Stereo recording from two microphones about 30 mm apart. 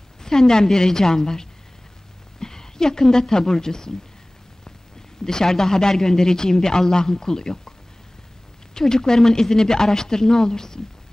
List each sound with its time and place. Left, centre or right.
0.2 s speech: centre
5.2 s speech: centre
8.7 s speech: centre